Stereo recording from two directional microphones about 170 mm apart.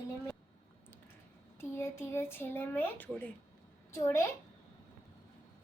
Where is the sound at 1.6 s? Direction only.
15° left (ahead or behind).